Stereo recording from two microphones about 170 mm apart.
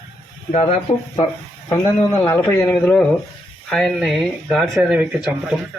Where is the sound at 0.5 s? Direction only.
40° left (ahead or behind).